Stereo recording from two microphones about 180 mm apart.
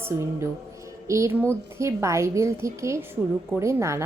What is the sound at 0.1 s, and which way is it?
A woman's voice, 15° right (ahead or behind).